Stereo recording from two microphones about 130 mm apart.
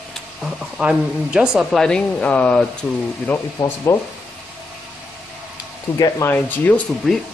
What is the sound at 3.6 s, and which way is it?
Speech, 20° left (ahead or behind).